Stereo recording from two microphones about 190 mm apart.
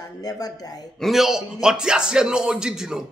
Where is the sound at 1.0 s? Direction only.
Centre (ahead or behind).